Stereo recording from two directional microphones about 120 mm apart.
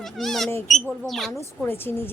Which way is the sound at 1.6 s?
15° left (ahead or behind).